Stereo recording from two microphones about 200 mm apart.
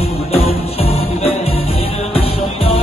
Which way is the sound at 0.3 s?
30° left (ahead or behind).